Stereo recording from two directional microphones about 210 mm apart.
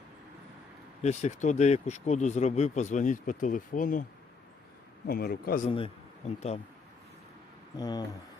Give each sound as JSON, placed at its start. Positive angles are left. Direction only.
{"t": 1.0, "sound": "speech", "side_deg": 35}
{"t": 5.0, "sound": "a man's voice", "side_deg": 45}
{"t": 5.6, "sound": "a man's voice", "side_deg": 30}
{"t": 7.8, "sound": "speech", "side_deg": 20}